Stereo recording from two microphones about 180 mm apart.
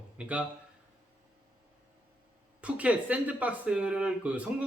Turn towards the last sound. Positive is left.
turn(degrees=-5)  # may be behind; listen again after turning